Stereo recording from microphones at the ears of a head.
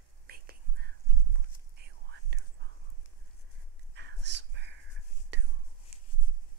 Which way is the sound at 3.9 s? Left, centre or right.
Right.